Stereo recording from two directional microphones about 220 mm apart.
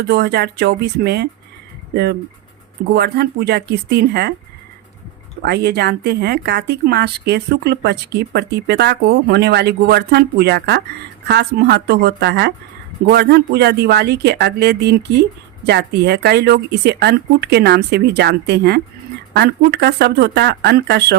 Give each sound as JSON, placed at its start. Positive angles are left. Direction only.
{"t": 0.1, "sound": "speech", "side_deg": -50}
{"t": 2.9, "sound": "speech", "side_deg": -45}
{"t": 5.5, "sound": "speech", "side_deg": -45}